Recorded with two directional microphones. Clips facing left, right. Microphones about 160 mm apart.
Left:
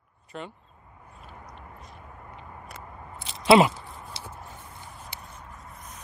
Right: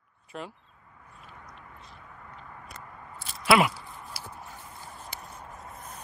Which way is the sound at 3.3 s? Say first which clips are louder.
Left 5 dB; 25° left (ahead or behind).